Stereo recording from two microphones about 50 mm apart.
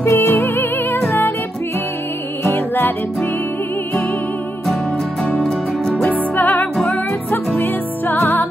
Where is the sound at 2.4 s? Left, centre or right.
Left.